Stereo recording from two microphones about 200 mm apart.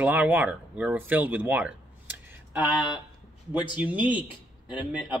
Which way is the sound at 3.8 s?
10° right (ahead or behind).